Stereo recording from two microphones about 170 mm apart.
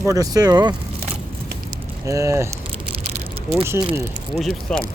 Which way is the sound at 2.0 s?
20° right (ahead or behind).